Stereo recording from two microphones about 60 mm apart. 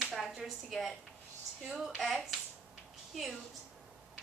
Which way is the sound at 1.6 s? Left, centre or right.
Centre.